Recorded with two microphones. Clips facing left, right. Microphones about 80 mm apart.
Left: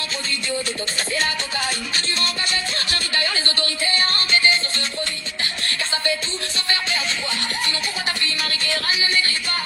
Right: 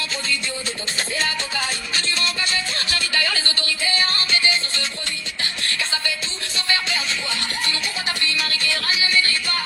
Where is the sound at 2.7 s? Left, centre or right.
Left.